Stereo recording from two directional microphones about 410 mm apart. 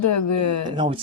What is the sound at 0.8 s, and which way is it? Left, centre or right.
Speech, centre.